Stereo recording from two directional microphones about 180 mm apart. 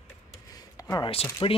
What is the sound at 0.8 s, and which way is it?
Speech, 25° left (ahead or behind).